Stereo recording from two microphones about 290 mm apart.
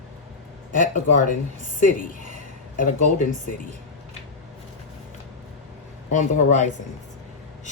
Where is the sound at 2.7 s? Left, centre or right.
Left.